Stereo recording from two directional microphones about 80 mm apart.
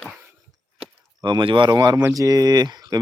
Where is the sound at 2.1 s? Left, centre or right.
Right.